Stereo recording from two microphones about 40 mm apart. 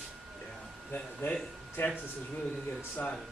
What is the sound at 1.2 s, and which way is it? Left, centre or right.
Speech, left.